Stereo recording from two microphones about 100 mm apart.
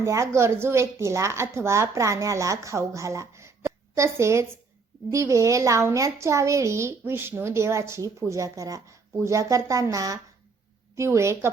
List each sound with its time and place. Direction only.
0.0 s speech: 30° right (ahead or behind)